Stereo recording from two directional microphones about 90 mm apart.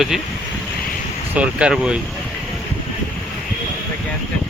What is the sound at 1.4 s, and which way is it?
Speech, 10° right (ahead or behind).